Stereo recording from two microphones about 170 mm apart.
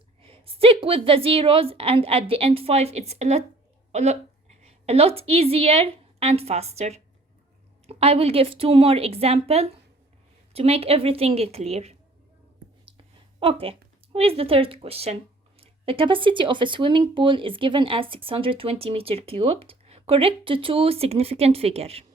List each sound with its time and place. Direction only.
0.2 s a woman's voice: 35° right (ahead or behind)
13.4 s speech: 35° right (ahead or behind)